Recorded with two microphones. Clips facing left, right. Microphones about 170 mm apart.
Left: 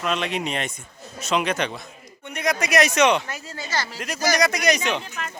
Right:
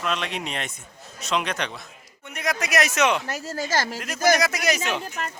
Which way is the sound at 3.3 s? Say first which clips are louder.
Right 4 dB; 40° right (ahead or behind).